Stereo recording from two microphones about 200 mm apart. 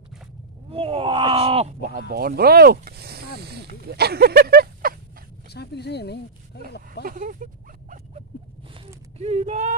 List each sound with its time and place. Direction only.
0.7 s speech: 30° right (ahead or behind); by 4.9 s 50° right (ahead or behind)
5.5 s speech: 55° left (ahead or behind)
7.1 s speech: 40° right (ahead or behind)
9.2 s speech: 30° right (ahead or behind)